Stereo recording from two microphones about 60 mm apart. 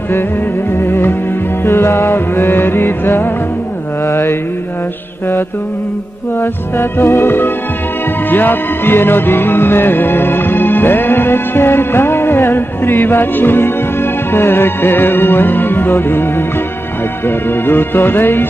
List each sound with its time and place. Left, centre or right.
0.7 s music: left
6.4 s music: left